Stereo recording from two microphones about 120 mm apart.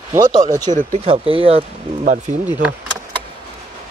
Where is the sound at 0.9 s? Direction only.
55° right (ahead or behind).